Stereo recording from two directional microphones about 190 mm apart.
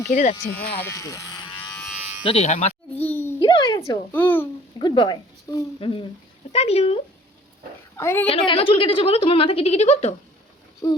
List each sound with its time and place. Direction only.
0.1 s speech: 45° left (ahead or behind)
0.5 s speech: 10° left (ahead or behind)
2.2 s speech: 35° left (ahead or behind)
3.0 s a sound: 10° left (ahead or behind)
3.4 s a sound: 20° left (ahead or behind)
4.1 s a child's voice: 10° left (ahead or behind)
4.8 s speech: 25° left (ahead or behind)
7.9 s a child's voice: 15° left (ahead or behind)
8.3 s speech: 30° left (ahead or behind)
10.8 s speech: 20° left (ahead or behind)